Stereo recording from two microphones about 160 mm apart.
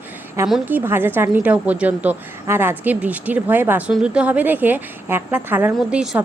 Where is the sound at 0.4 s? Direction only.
5° right (ahead or behind).